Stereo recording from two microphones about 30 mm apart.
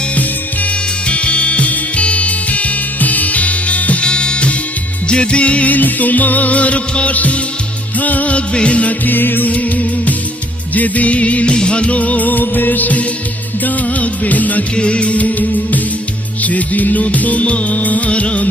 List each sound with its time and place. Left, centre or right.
1.0 s music: left
4.0 s music: left
5.7 s music: left
8.5 s music: left
8.9 s music: left
11.4 s music: left
13.7 s music: left
14.8 s music: left
15.2 s music: left
18.1 s music: left